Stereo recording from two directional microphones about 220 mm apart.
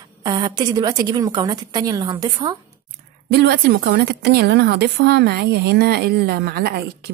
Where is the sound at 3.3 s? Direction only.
45° right (ahead or behind).